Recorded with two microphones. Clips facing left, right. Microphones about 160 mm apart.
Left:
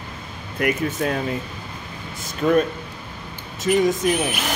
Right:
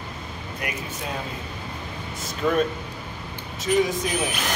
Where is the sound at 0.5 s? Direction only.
65° left (ahead or behind).